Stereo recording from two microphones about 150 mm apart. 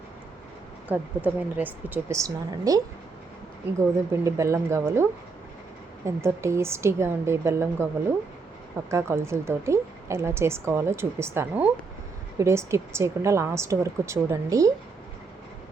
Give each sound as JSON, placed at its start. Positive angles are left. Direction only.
{"t": 0.9, "sound": "a woman's voice", "side_deg": -10}
{"t": 2.2, "sound": "a woman's voice", "side_deg": -25}
{"t": 6.1, "sound": "a woman's voice", "side_deg": -20}
{"t": 8.9, "sound": "a woman's voice", "side_deg": -15}